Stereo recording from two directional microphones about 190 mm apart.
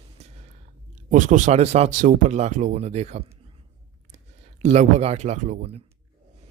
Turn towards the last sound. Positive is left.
turn(degrees=-40)  # may be behind; listen again after turning